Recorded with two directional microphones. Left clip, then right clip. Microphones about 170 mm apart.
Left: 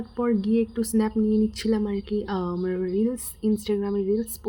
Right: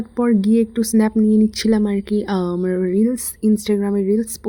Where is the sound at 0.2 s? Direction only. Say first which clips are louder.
Right 7 dB; 35° right (ahead or behind).